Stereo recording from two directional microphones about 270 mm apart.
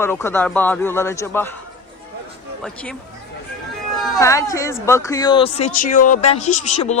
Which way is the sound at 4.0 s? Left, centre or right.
Centre.